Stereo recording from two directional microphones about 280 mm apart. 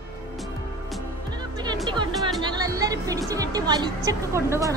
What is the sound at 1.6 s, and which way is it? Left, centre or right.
Music, centre.